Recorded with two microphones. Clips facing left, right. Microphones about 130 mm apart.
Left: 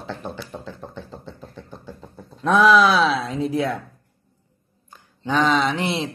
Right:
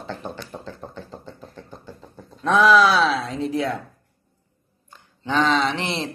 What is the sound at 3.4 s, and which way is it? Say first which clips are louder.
Speech: left 2 dB; 15° left (ahead or behind).